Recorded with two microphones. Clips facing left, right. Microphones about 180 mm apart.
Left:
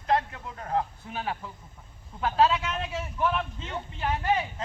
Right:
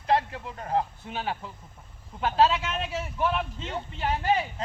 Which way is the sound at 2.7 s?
25° right (ahead or behind).